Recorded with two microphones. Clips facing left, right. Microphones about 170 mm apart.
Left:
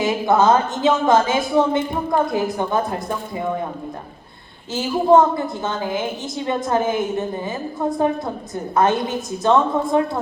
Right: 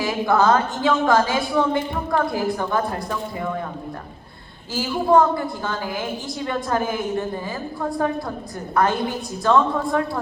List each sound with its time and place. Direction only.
0.0 s a woman's voice: 20° left (ahead or behind)
5.1 s a woman's voice: 20° left (ahead or behind)